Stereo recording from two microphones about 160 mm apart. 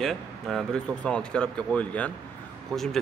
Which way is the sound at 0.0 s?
Centre (ahead or behind).